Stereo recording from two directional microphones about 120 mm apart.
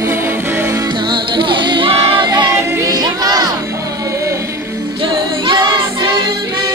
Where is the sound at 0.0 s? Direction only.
20° right (ahead or behind).